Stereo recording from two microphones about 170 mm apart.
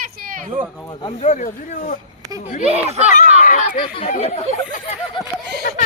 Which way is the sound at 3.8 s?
35° left (ahead or behind).